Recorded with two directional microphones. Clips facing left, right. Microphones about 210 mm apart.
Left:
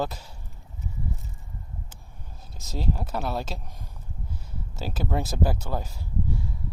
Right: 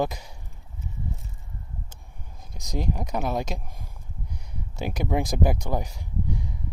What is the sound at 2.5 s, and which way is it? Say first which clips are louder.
Speech: right 1 dB; 15° right (ahead or behind).